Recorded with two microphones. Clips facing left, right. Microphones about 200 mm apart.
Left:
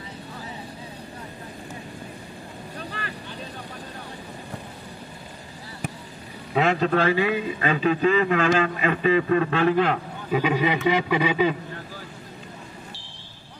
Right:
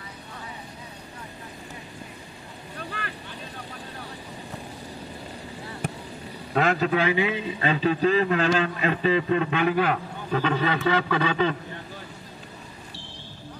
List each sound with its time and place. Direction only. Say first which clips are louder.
6.5 s a man's voice: left 1 dB; centre (ahead or behind); by 9.6 s 25° right (ahead or behind)
9.7 s a man's voice: left 2 dB; 5° right (ahead or behind)
10.3 s a sound: left 2 dB; 10° left (ahead or behind)